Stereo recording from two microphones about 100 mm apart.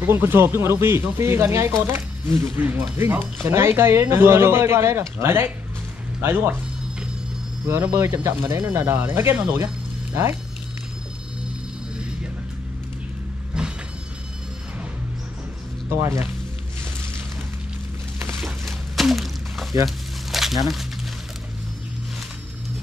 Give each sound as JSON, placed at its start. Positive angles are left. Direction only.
{"t": 0.0, "sound": "speech", "side_deg": -25}
{"t": 7.6, "sound": "speech", "side_deg": -25}
{"t": 13.5, "sound": "mechanisms", "side_deg": -10}
{"t": 15.9, "sound": "speech", "side_deg": -25}
{"t": 18.4, "sound": "a sound", "side_deg": 0}